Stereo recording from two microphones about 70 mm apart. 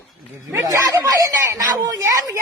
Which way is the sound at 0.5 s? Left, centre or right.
Right.